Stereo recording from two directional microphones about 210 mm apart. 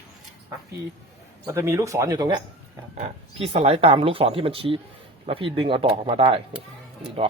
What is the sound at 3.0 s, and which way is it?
Speech, 30° right (ahead or behind).